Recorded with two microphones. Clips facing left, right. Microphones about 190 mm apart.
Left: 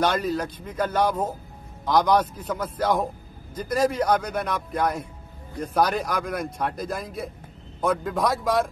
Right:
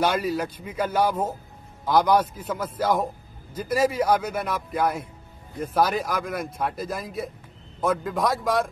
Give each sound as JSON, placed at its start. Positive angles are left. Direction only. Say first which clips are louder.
{"t": 0.0, "sound": "speech", "louder": "even", "side_deg": -5}